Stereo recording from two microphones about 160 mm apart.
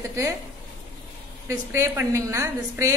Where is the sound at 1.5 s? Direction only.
15° right (ahead or behind).